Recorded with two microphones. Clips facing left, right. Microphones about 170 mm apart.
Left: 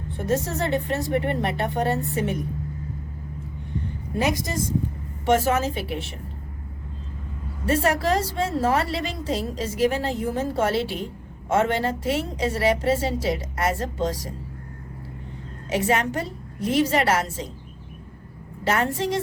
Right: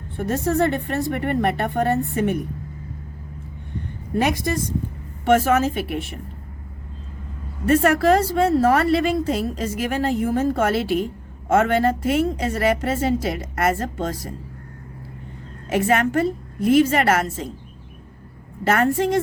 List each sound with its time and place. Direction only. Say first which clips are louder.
0.3 s a woman's voice: right 4 dB; 55° right (ahead or behind)
5.2 s a woman's voice: right 3 dB; 55° right (ahead or behind)
7.7 s a woman's voice: right 5 dB; 55° right (ahead or behind)
15.7 s a woman's voice: right 4 dB; 55° right (ahead or behind)
18.7 s a woman's voice: right 5 dB; 55° right (ahead or behind)